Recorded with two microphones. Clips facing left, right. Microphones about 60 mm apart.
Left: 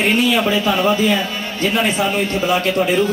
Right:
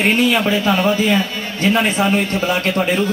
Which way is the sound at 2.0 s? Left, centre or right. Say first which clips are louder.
Right 1 dB; right.